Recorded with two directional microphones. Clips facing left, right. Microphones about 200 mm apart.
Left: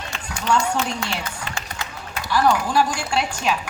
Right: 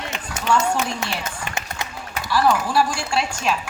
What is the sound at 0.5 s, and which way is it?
A woman's voice, 20° right (ahead or behind).